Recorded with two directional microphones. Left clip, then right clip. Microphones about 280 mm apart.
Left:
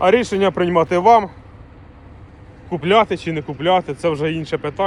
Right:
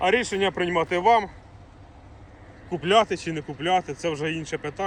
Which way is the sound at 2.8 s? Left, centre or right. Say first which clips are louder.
Left 5 dB; centre.